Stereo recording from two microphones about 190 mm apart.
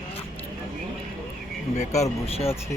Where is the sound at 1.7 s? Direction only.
35° left (ahead or behind).